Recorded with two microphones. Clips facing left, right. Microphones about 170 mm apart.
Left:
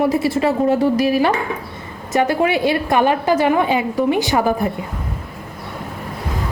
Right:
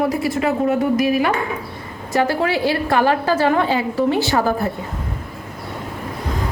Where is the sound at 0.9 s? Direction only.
30° left (ahead or behind).